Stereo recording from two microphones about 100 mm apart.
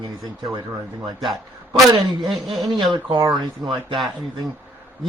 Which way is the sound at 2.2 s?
Centre (ahead or behind).